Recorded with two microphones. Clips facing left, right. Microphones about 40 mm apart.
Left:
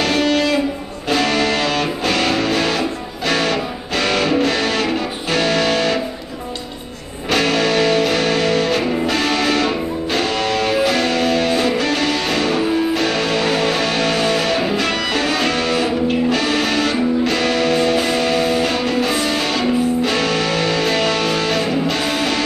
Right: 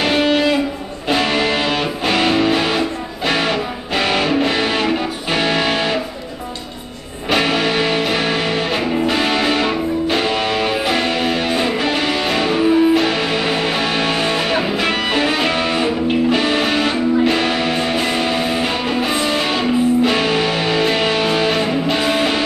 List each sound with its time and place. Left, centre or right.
0.0 s music: centre
7.2 s music: centre